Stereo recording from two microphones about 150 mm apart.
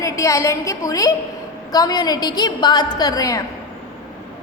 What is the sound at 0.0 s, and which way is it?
A woman's voice, 20° left (ahead or behind).